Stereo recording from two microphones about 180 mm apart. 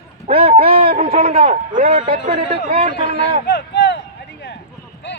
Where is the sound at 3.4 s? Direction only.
70° left (ahead or behind).